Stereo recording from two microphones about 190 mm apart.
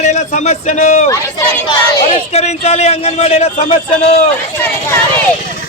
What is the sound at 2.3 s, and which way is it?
Speech, 35° left (ahead or behind).